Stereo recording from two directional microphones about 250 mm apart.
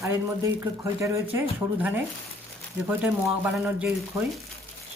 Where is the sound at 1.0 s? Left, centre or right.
Centre.